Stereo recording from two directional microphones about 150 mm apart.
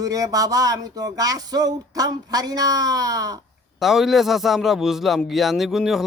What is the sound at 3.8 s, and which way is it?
A man's voice, centre (ahead or behind).